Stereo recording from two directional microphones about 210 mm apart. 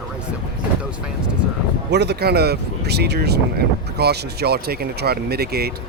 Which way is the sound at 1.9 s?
50° right (ahead or behind).